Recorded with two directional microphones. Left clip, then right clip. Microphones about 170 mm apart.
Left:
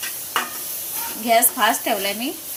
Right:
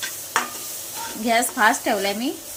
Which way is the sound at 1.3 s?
25° right (ahead or behind).